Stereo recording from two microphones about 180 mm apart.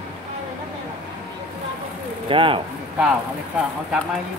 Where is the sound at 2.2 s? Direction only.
30° right (ahead or behind).